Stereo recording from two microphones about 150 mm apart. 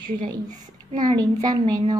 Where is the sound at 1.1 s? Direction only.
25° right (ahead or behind).